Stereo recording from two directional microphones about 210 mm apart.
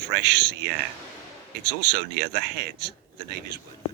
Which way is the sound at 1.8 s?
50° right (ahead or behind).